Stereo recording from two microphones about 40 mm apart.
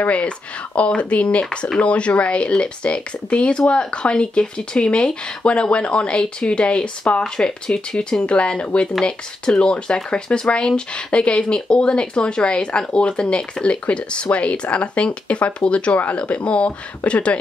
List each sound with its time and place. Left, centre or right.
0.7 s speech: left
13.7 s speech: left